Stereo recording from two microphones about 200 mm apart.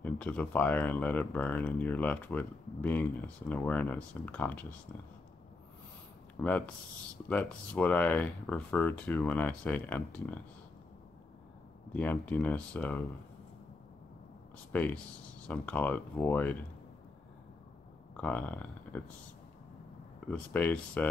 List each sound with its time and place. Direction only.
0.0 s speech: 10° left (ahead or behind)
6.4 s speech: 5° left (ahead or behind)
11.9 s speech: 10° left (ahead or behind)
14.7 s speech: 10° left (ahead or behind)
18.1 s speech: 5° left (ahead or behind)
20.2 s speech: 10° left (ahead or behind)